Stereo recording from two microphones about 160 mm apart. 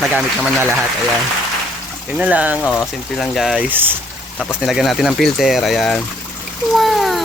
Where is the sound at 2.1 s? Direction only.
10° right (ahead or behind).